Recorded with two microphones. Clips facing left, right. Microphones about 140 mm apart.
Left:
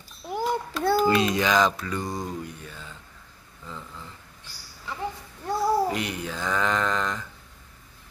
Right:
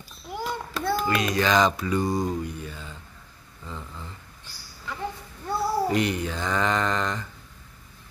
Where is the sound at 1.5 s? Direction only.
Centre (ahead or behind).